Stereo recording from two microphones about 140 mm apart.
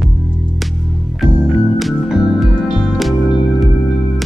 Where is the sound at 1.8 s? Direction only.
Centre (ahead or behind).